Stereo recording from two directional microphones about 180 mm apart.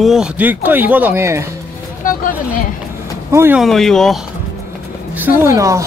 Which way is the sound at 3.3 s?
10° right (ahead or behind).